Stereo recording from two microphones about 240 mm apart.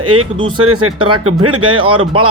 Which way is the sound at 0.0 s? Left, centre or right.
Right.